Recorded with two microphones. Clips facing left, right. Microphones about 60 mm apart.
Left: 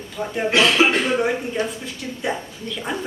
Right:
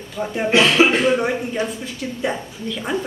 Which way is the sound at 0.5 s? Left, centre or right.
Centre.